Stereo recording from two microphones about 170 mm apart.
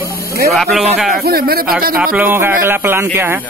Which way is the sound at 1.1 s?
65° right (ahead or behind).